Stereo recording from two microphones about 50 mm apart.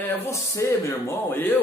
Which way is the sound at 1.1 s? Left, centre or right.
Left.